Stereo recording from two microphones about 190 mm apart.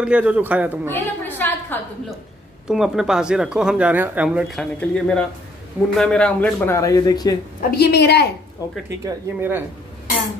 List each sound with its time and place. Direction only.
0.0 s speech: 5° right (ahead or behind)
0.8 s a woman's voice: 10° left (ahead or behind)
2.7 s speech: centre (ahead or behind)
4.7 s speech: 5° left (ahead or behind)
7.7 s a woman's voice: 55° left (ahead or behind)
9.0 s speech: 10° right (ahead or behind)